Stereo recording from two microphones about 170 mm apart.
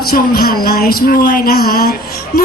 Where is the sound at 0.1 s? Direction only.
60° left (ahead or behind).